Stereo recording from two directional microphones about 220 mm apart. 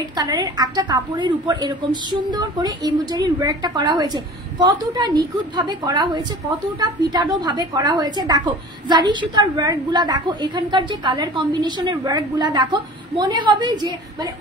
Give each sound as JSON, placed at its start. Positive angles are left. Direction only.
{"t": 0.1, "sound": "a woman's voice", "side_deg": -20}